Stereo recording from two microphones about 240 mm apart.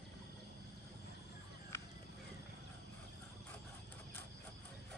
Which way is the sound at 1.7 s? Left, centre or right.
Centre.